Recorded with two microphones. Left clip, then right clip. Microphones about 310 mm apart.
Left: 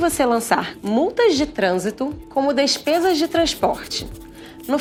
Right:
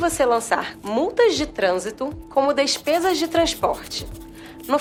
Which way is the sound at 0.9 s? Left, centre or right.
Left.